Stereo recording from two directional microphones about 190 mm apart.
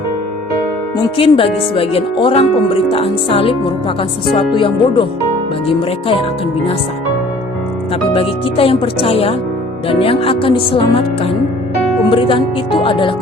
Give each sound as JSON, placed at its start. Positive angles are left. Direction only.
{"t": 1.0, "sound": "speech", "side_deg": 30}
{"t": 8.1, "sound": "speech", "side_deg": 30}